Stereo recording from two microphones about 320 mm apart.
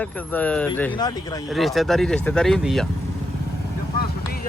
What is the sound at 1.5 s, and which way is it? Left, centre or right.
Speech, centre.